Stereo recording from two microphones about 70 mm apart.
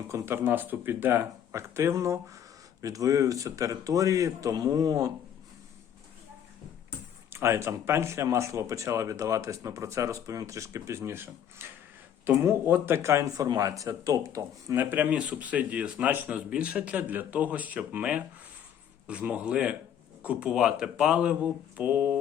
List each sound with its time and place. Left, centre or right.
0.1 s speech: right
0.4 s speech: right
4.5 s speech: right
7.3 s speech: right
12.6 s speech: right
14.8 s speech: right